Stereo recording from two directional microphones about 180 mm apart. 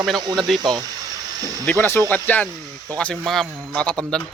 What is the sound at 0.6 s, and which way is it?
Speech, 25° right (ahead or behind).